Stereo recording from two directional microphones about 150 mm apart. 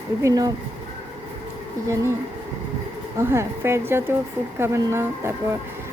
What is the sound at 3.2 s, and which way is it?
A woman's voice, 15° right (ahead or behind).